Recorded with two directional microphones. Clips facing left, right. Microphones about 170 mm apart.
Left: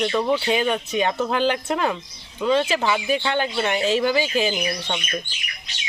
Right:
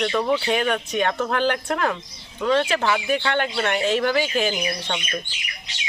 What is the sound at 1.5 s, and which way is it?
Speech, 20° left (ahead or behind).